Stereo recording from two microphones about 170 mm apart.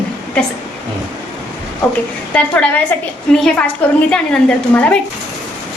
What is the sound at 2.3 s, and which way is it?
A woman's voice, 10° left (ahead or behind).